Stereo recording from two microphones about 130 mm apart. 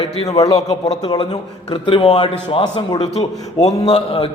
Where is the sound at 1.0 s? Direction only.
35° left (ahead or behind).